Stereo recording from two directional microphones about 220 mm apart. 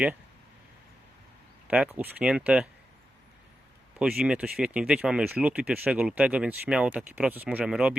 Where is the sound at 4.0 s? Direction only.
5° right (ahead or behind).